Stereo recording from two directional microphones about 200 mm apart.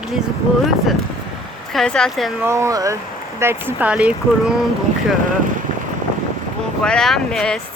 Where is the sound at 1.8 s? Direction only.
5° left (ahead or behind).